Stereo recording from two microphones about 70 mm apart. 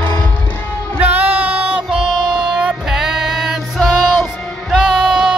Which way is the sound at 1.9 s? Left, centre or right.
Centre.